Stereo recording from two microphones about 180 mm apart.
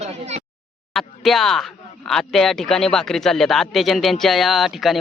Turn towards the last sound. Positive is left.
turn(degrees=0)  # may be behind; listen again after turning